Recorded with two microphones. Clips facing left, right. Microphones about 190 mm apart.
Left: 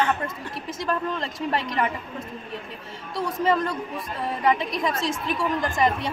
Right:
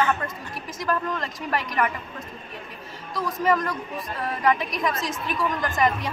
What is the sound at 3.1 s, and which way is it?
A woman's voice, 25° left (ahead or behind).